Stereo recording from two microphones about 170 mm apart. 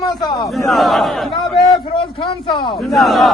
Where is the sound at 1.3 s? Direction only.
30° left (ahead or behind).